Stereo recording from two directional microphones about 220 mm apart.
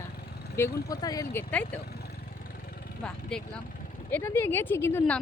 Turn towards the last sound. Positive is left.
turn(degrees=10)  # may be behind; listen again after turning